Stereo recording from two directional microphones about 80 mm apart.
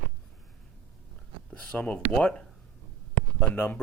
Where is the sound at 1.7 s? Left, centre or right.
Centre.